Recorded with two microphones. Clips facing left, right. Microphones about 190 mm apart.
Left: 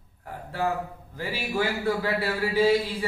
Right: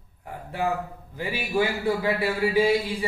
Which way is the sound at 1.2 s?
15° right (ahead or behind).